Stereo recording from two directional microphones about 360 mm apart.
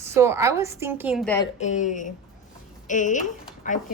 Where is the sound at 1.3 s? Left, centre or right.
Centre.